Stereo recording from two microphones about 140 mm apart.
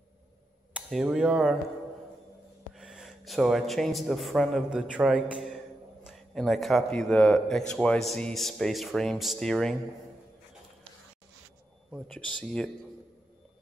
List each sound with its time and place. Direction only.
0.7 s a man's voice: 5° right (ahead or behind)
2.7 s a man's voice: 5° right (ahead or behind)
12.1 s a man's voice: 5° left (ahead or behind)